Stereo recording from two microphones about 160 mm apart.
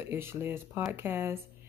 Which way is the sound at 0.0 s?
15° right (ahead or behind).